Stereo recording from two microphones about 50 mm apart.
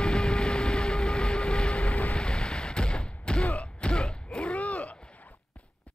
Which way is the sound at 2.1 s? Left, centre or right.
Centre.